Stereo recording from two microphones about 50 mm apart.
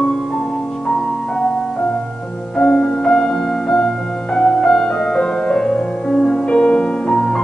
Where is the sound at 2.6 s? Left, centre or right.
Centre.